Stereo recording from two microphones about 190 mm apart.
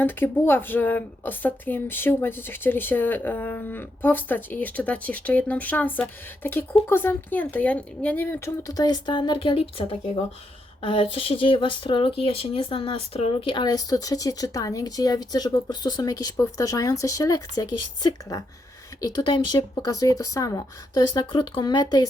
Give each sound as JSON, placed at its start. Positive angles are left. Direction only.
{"t": 0.0, "sound": "a woman's voice", "side_deg": 10}